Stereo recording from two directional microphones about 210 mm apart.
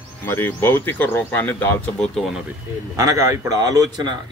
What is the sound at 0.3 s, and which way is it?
Speech, 10° left (ahead or behind).